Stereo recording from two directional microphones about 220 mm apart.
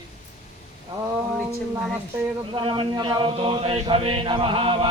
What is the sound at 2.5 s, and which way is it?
Speech, 20° right (ahead or behind).